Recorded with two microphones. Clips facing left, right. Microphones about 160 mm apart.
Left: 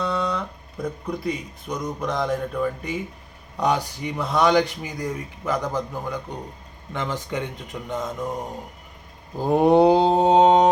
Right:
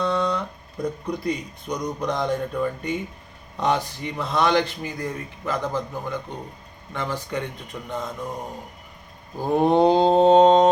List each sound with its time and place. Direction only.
0.0 s a sound: 5° left (ahead or behind)
1.0 s speech: 5° left (ahead or behind)
9.4 s speech: 15° left (ahead or behind)